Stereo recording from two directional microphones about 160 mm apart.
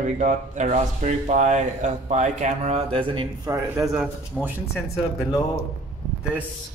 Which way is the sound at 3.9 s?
10° right (ahead or behind).